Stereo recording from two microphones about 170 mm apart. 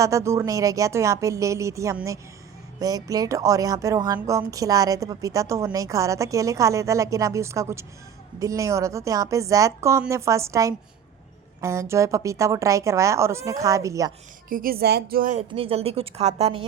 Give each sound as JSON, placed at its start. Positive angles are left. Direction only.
{"t": 0.0, "sound": "speech", "side_deg": -15}
{"t": 14.5, "sound": "speech", "side_deg": -60}
{"t": 15.4, "sound": "a woman's voice", "side_deg": -35}